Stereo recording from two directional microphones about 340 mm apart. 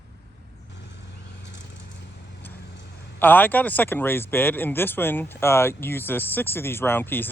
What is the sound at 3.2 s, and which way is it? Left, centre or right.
Speech, centre.